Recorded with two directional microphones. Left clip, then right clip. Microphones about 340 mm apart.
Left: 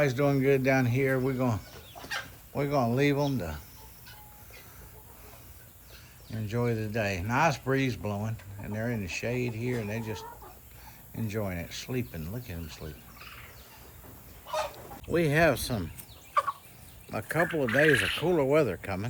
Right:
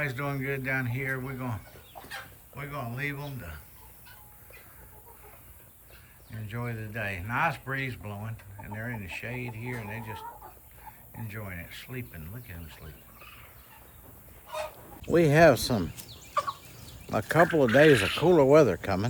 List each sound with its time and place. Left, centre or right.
0.0 s speech: centre
2.6 s speech: centre
6.3 s speech: centre
11.3 s speech: centre
15.1 s speech: centre
16.4 s chicken: left
17.1 s speech: centre